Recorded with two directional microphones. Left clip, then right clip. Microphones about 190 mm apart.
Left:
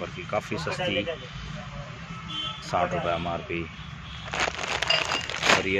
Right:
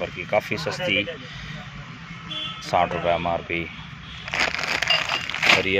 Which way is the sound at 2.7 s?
15° right (ahead or behind).